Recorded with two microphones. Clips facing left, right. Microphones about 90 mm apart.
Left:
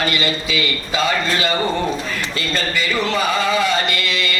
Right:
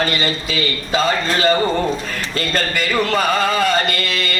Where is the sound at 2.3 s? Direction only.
45° right (ahead or behind).